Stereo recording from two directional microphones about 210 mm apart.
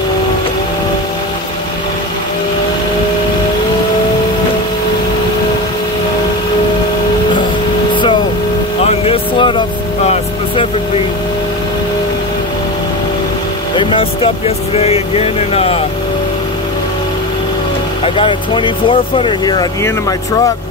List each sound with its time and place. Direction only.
7.9 s vehicle: 20° left (ahead or behind)
13.7 s vehicle: 25° left (ahead or behind)
18.0 s speech: 25° left (ahead or behind)